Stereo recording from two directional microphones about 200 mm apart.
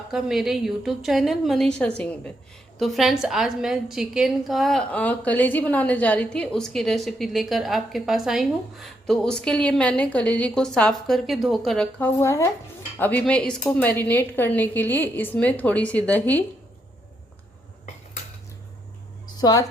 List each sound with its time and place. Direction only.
0.1 s a woman's voice: centre (ahead or behind)
19.4 s speech: 20° left (ahead or behind)